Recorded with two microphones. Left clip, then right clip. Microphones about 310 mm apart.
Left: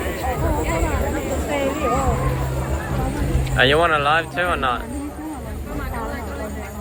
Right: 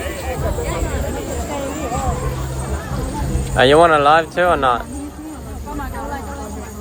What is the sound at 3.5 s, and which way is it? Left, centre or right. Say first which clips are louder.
Speech: right 5 dB; centre.